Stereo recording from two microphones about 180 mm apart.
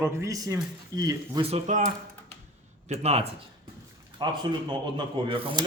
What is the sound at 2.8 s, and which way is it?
Speech, 35° right (ahead or behind).